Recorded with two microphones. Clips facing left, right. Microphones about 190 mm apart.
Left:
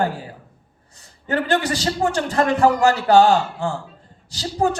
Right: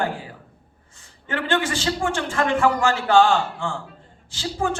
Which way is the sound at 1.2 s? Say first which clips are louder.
Left 3 dB; 40° left (ahead or behind).